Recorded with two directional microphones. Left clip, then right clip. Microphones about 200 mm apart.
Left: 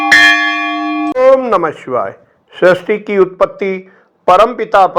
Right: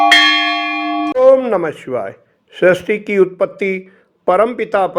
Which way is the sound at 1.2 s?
5° right (ahead or behind).